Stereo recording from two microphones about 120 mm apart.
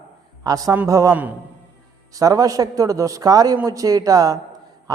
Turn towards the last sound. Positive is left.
turn(degrees=-30)  # may be behind; listen again after turning